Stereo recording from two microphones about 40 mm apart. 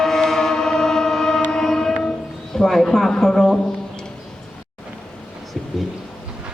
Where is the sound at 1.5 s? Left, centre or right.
Centre.